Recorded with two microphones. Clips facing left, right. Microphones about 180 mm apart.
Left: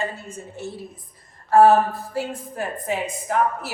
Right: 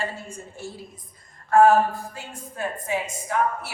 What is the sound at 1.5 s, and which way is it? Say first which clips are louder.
Speech: left 2 dB; 35° left (ahead or behind).